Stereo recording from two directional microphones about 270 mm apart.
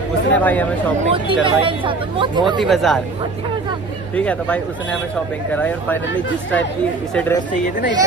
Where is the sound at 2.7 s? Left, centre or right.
Centre.